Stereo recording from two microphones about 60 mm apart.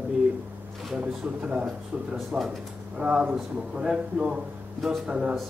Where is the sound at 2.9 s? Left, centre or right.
Centre.